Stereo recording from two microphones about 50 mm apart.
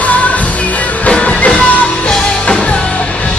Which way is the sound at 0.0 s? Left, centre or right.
Left.